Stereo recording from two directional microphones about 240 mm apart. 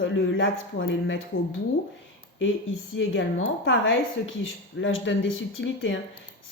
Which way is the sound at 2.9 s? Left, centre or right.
Left.